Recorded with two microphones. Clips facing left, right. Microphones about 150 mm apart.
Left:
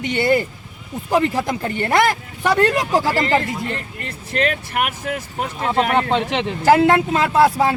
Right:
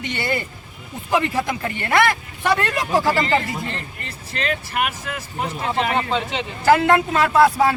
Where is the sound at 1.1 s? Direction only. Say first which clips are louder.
Left 2 dB; 35° left (ahead or behind).